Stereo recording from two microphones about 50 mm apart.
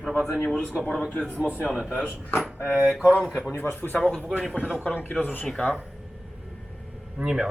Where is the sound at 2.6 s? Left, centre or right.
Left.